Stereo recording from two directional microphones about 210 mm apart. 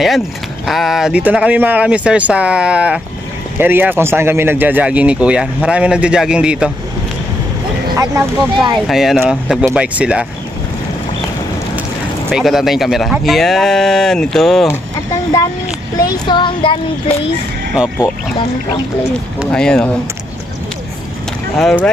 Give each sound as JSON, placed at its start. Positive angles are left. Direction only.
{"t": 0.7, "sound": "speech", "side_deg": 0}
{"t": 8.0, "sound": "speech", "side_deg": -15}
{"t": 8.8, "sound": "speech", "side_deg": 0}
{"t": 12.3, "sound": "speech", "side_deg": 0}
{"t": 16.0, "sound": "child singing", "side_deg": 20}
{"t": 19.4, "sound": "speech", "side_deg": 5}
{"t": 21.5, "sound": "speech", "side_deg": 5}